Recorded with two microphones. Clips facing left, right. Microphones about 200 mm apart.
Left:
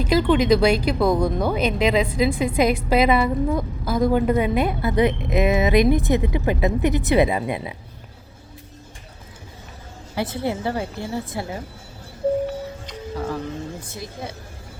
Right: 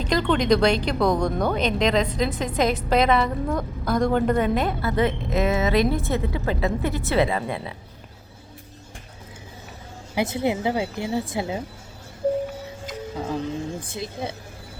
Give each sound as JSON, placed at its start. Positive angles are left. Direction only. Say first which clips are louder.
{"t": 0.0, "sound": "speech", "louder": "left 4 dB", "side_deg": 5}
{"t": 10.2, "sound": "a woman's voice", "louder": "right 2 dB", "side_deg": -15}
{"t": 13.1, "sound": "a woman's voice", "louder": "even", "side_deg": -15}